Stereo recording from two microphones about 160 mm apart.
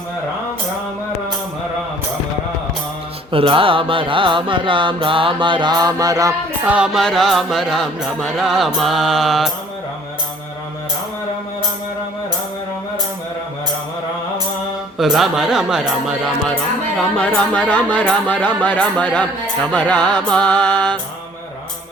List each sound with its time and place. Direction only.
3.3 s mantra: 35° right (ahead or behind)
6.7 s music: 5° right (ahead or behind)
14.9 s music: centre (ahead or behind)
17.0 s speech: 5° left (ahead or behind)